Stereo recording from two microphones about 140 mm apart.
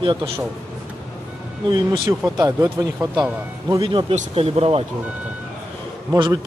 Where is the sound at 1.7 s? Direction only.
30° right (ahead or behind).